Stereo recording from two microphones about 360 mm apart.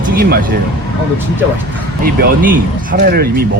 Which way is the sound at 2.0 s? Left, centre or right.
Right.